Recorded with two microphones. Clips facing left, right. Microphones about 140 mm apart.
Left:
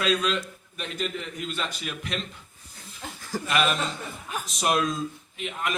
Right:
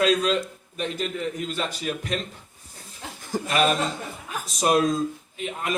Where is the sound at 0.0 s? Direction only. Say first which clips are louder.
Right 4 dB; 40° right (ahead or behind).